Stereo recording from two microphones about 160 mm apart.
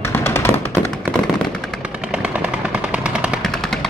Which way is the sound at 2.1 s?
5° right (ahead or behind).